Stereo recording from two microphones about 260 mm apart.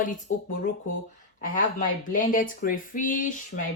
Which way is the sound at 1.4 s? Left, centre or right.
Left.